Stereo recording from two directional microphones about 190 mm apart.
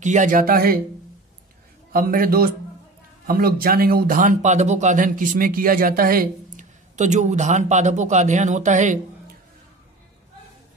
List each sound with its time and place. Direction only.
0.0 s speech: 40° right (ahead or behind)
1.9 s speech: 50° right (ahead or behind)